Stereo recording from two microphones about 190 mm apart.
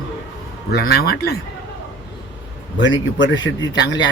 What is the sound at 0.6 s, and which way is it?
Speech, 55° left (ahead or behind).